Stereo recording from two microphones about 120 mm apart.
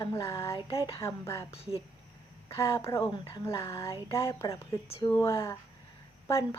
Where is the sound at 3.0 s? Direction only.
40° left (ahead or behind).